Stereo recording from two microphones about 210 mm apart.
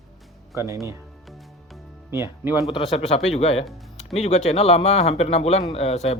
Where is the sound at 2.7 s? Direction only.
25° left (ahead or behind).